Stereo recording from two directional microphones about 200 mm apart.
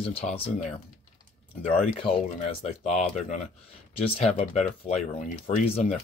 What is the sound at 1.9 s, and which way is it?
Speech, 30° left (ahead or behind).